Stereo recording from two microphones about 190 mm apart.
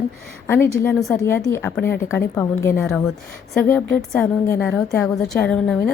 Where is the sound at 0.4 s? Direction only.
10° left (ahead or behind).